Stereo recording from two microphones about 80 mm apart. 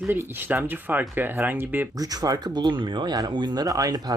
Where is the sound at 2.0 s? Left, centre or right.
Right.